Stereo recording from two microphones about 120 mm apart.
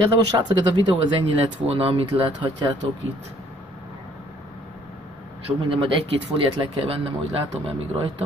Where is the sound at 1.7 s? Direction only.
55° right (ahead or behind).